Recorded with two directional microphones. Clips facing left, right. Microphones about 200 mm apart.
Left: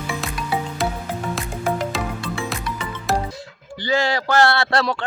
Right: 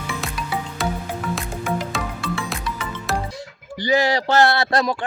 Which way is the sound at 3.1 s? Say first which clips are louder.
Left 3 dB; centre (ahead or behind).